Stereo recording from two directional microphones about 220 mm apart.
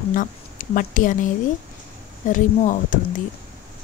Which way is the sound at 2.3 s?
35° left (ahead or behind).